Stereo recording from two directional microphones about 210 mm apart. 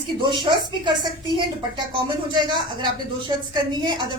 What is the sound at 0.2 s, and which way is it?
Speech, 20° right (ahead or behind).